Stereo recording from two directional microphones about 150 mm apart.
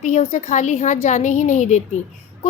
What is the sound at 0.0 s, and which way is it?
A woman's voice, 50° left (ahead or behind).